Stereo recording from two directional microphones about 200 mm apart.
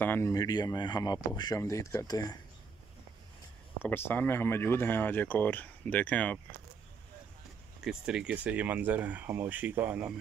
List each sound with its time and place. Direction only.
0.0 s speech: 10° left (ahead or behind)
3.8 s speech: 10° left (ahead or behind)
7.8 s speech: 5° right (ahead or behind)